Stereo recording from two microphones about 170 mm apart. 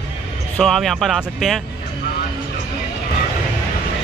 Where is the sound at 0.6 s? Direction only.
Centre (ahead or behind).